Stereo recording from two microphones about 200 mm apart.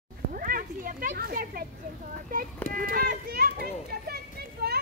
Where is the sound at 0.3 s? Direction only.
45° right (ahead or behind).